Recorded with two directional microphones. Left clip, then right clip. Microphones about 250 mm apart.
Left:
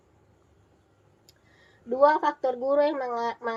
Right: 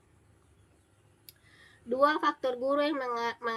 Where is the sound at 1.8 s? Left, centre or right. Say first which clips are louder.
Left 5 dB; right.